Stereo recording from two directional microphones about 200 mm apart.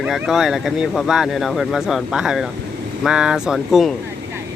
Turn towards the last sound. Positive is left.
turn(degrees=0)  # may be behind; listen again after turning